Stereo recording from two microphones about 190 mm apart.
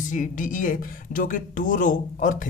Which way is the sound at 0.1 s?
45° left (ahead or behind).